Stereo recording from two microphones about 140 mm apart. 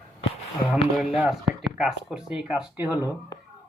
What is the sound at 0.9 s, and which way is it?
Speech, centre (ahead or behind).